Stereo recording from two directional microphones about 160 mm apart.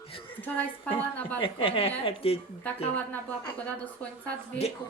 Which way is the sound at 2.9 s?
10° left (ahead or behind).